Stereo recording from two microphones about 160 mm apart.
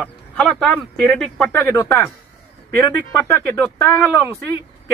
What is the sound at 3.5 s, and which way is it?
Speech, 15° left (ahead or behind).